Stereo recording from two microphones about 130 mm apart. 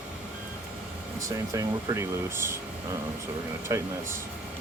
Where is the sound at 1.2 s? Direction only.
25° right (ahead or behind).